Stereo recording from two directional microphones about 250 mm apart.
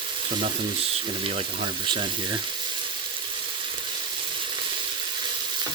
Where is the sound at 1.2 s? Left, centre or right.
Right.